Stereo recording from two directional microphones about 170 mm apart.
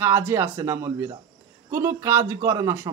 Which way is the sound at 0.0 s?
15° right (ahead or behind).